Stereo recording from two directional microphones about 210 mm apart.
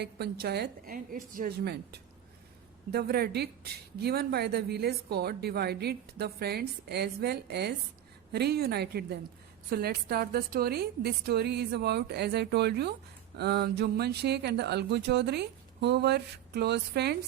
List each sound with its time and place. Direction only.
0.0 s a woman's voice: 50° right (ahead or behind)